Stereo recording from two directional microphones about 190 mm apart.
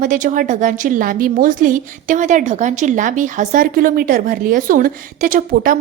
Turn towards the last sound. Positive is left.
turn(degrees=-45)  # may be behind; listen again after turning